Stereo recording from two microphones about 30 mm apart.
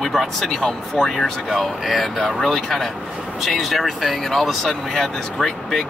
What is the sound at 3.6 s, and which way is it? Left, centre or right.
Speech, centre.